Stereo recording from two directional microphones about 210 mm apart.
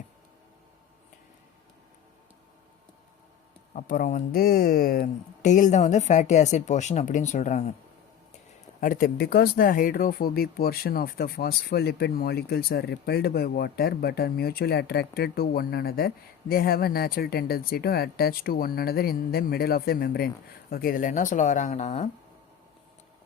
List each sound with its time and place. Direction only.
3.8 s speech: 40° left (ahead or behind)
8.8 s speech: 40° left (ahead or behind)